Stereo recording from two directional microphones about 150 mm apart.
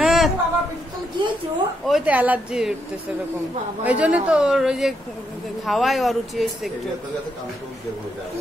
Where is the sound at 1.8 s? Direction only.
5° right (ahead or behind).